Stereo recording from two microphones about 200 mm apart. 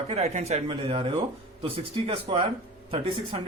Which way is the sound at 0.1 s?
30° right (ahead or behind).